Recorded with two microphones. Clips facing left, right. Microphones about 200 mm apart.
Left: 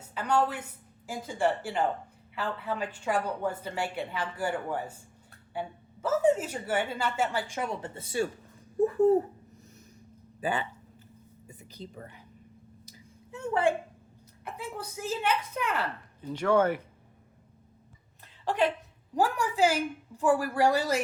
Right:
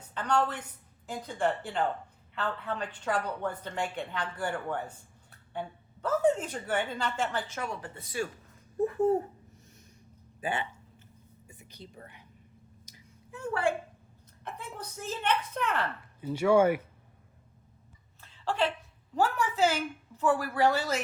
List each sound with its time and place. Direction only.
0.1 s a woman's voice: 10° left (ahead or behind); by 9.1 s 35° left (ahead or behind)
10.4 s speech: 35° left (ahead or behind)
13.3 s a woman's voice: 20° left (ahead or behind)
14.4 s a woman's voice: 10° left (ahead or behind)
16.2 s speech: 10° right (ahead or behind)
18.2 s a sound: 15° left (ahead or behind)
19.1 s a woman's voice: 15° left (ahead or behind)